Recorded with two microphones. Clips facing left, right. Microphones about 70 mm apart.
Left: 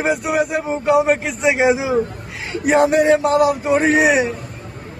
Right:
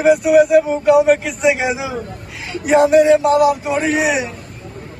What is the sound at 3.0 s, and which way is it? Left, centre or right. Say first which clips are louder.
Speech: right 2 dB; left.